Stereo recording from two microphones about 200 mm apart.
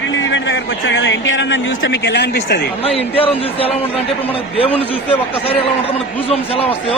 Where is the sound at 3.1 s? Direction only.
30° left (ahead or behind).